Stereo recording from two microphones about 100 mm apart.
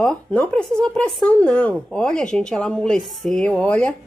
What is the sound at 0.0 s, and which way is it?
Speech, 10° left (ahead or behind).